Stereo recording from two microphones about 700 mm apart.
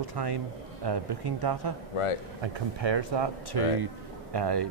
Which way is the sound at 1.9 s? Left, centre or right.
Left.